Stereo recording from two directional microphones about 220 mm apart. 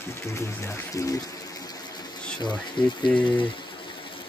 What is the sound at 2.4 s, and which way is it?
Speech, 20° left (ahead or behind).